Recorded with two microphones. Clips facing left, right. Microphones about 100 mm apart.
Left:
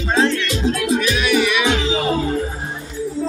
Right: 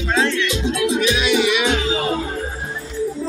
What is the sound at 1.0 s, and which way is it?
Music, 25° right (ahead or behind).